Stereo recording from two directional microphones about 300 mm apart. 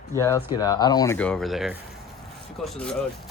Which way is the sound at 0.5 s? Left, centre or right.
Centre.